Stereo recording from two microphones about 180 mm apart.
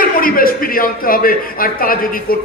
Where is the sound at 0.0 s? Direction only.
50° left (ahead or behind).